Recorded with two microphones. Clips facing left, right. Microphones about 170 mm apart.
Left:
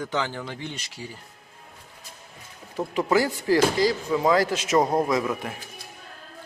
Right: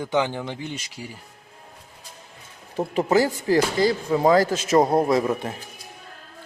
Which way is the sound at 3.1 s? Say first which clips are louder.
Right 2 dB; 40° right (ahead or behind).